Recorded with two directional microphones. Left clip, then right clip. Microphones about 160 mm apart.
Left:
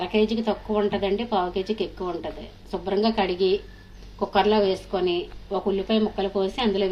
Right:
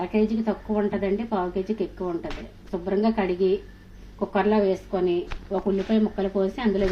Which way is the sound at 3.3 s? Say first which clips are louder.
Even; 20° left (ahead or behind).